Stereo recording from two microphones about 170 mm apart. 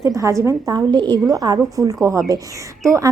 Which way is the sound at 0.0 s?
20° right (ahead or behind).